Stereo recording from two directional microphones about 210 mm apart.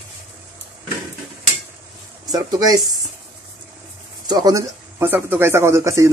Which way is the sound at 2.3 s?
20° right (ahead or behind).